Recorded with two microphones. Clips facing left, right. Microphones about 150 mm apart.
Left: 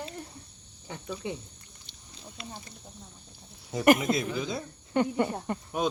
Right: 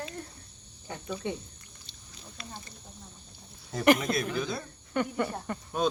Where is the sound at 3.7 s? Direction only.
10° left (ahead or behind).